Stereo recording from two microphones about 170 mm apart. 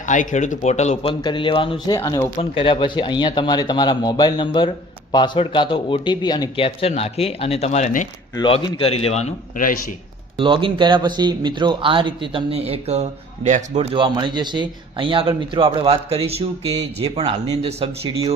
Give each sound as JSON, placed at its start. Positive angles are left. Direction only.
{"t": 0.0, "sound": "speech", "side_deg": 50}
{"t": 1.2, "sound": "speech", "side_deg": 30}
{"t": 2.0, "sound": "speech", "side_deg": 15}
{"t": 2.4, "sound": "a man's voice", "side_deg": 30}
{"t": 8.4, "sound": "a man's voice", "side_deg": 30}
{"t": 10.3, "sound": "speech", "side_deg": -30}
{"t": 13.9, "sound": "speech", "side_deg": -30}